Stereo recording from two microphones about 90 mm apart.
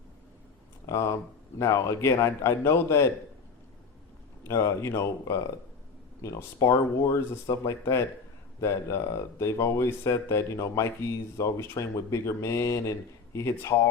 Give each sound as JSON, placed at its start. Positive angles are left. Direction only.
{"t": 0.9, "sound": "speech", "side_deg": 35}
{"t": 4.4, "sound": "speech", "side_deg": 35}